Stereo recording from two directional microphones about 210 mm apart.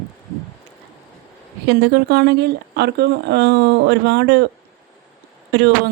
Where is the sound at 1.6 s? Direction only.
55° right (ahead or behind).